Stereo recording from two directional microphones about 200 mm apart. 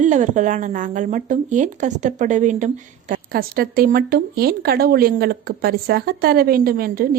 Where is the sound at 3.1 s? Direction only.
45° right (ahead or behind).